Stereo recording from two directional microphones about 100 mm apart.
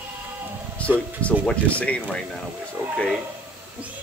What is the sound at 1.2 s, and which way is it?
Speech, 15° left (ahead or behind).